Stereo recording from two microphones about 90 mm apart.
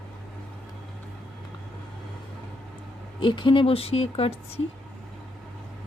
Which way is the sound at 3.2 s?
65° left (ahead or behind).